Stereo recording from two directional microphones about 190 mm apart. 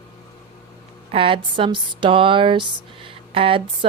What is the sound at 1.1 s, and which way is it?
A woman's voice, 30° right (ahead or behind).